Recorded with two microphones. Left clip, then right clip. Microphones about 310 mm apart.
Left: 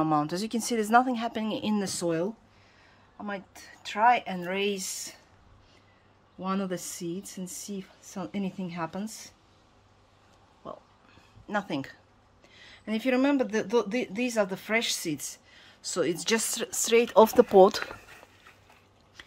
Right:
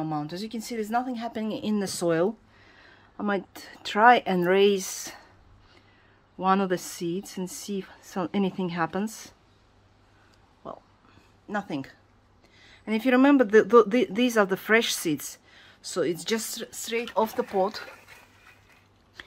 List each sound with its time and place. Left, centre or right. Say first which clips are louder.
0.0 s speech: left 5 dB; centre
2.7 s a sound: right 7 dB; centre
3.5 s speech: right 5 dB; centre
6.4 s speech: right 9 dB; centre
10.6 s speech: right 2 dB; centre
12.5 s a sound: right 4 dB; centre
13.5 s speech: right 10 dB; right
13.9 s speech: right 5 dB; centre; by 17.8 s left
19.2 s biting: right 4 dB; centre